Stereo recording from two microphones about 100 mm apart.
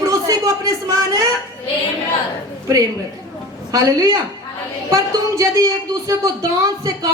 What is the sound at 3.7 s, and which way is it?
Speech, 35° right (ahead or behind).